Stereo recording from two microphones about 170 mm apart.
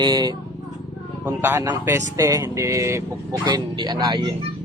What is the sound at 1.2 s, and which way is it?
Speech, 15° right (ahead or behind).